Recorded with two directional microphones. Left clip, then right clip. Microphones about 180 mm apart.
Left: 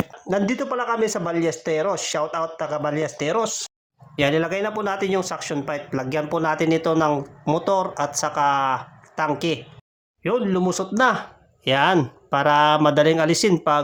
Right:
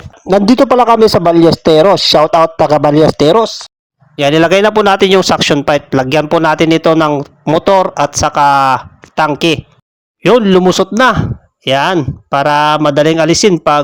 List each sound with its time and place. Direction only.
0.3 s a man's voice: 55° right (ahead or behind); by 13.5 s 35° right (ahead or behind)